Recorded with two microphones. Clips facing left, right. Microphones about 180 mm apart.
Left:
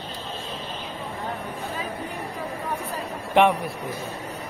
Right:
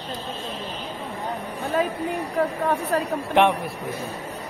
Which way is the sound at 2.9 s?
75° right (ahead or behind).